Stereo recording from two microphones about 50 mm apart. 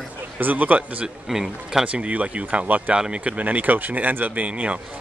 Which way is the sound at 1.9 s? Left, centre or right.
Right.